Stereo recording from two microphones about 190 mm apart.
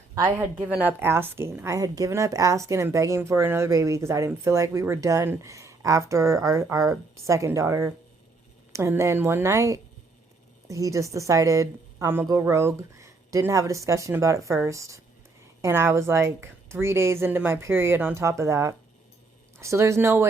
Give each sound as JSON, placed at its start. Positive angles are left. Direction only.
{"t": 0.1, "sound": "speech", "side_deg": -25}
{"t": 0.3, "sound": "a woman's voice", "side_deg": -10}